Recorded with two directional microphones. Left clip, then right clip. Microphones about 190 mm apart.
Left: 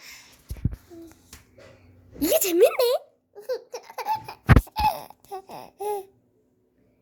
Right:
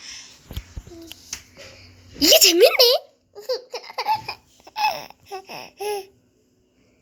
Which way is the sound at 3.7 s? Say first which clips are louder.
Right 7 dB; 15° left (ahead or behind).